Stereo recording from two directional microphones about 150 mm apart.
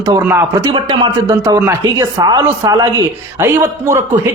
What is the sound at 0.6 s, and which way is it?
Speech, 30° right (ahead or behind).